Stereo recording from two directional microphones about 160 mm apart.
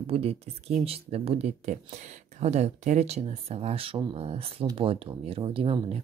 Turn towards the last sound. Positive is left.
turn(degrees=-35)  # may be behind; listen again after turning